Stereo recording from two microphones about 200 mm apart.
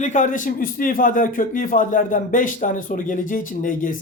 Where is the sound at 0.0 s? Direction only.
40° left (ahead or behind).